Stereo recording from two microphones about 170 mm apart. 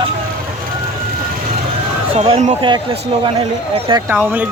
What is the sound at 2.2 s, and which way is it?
Speech, 40° right (ahead or behind).